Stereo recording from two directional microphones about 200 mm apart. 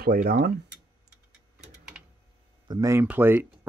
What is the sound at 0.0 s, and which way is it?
Speech, 50° right (ahead or behind).